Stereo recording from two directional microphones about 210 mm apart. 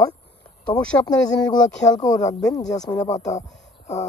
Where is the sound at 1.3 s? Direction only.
20° left (ahead or behind).